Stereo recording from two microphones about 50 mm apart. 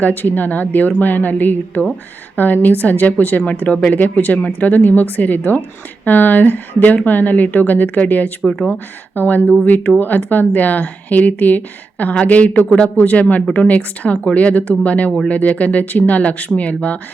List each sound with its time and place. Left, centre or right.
0.0 s speech: left
8.4 s speech: centre
9.1 s speech: left